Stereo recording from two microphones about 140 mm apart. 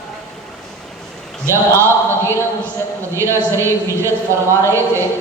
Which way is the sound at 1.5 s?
20° right (ahead or behind).